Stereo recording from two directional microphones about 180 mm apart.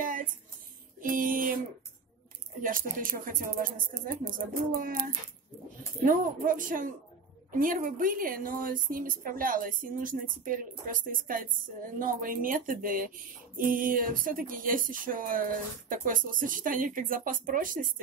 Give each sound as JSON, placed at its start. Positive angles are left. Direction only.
{"t": 1.0, "sound": "speech", "side_deg": -50}
{"t": 2.6, "sound": "speech", "side_deg": -50}